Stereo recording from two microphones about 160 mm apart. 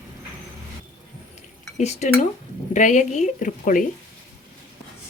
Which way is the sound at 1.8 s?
45° left (ahead or behind).